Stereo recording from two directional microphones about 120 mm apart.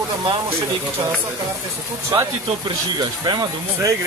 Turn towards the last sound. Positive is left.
turn(degrees=-35)  # may be behind; listen again after turning